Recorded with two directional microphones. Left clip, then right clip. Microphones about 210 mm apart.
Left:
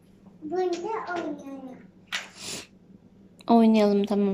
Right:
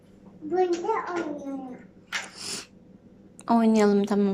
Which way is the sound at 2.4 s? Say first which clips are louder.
Right 1 dB; 20° left (ahead or behind).